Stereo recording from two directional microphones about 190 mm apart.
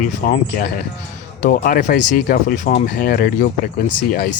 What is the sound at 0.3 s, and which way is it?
Speech, 45° left (ahead or behind).